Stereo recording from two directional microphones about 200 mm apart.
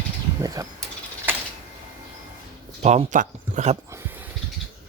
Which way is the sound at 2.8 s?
35° right (ahead or behind).